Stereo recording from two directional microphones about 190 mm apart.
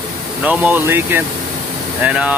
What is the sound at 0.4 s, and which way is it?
Speech, 5° right (ahead or behind).